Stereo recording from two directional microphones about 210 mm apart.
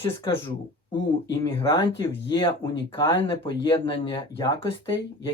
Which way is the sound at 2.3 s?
20° left (ahead or behind).